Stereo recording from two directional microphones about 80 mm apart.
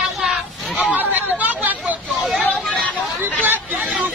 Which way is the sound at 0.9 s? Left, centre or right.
Right.